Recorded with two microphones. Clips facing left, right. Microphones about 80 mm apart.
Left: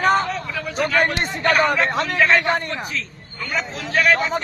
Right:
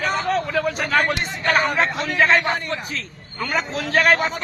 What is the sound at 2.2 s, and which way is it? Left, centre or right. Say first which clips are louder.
Speech: right 1 dB; right.